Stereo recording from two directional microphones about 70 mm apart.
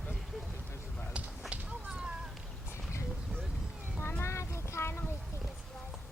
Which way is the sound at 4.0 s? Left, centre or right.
Left.